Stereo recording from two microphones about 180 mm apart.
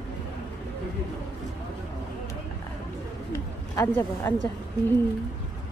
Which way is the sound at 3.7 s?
15° left (ahead or behind).